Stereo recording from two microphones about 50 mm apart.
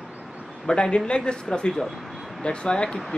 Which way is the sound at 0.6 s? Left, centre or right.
Centre.